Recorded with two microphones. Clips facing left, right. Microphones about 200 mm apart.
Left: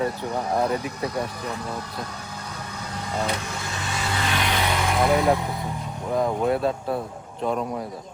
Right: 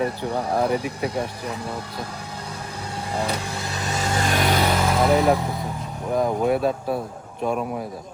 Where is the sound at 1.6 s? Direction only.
30° right (ahead or behind).